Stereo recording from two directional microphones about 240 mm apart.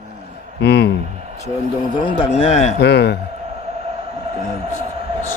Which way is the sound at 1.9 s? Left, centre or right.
Left.